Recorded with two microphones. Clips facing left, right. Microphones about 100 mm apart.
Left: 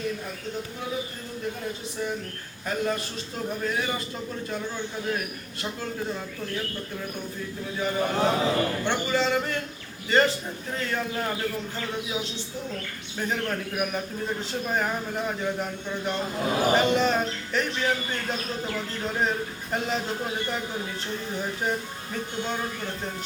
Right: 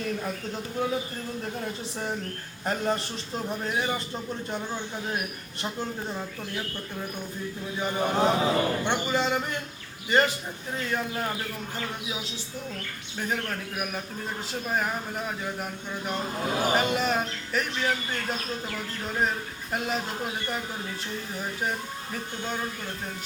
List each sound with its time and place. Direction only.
2.6 s a man's voice: 35° right (ahead or behind)
7.8 s a sound: 20° right (ahead or behind)
13.1 s a man's voice: centre (ahead or behind)
15.5 s a man's voice: 5° right (ahead or behind)